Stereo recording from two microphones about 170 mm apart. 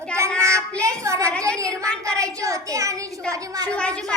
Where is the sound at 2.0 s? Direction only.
20° right (ahead or behind).